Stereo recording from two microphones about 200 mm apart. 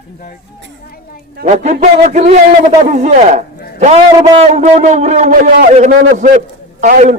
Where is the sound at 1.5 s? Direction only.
35° right (ahead or behind).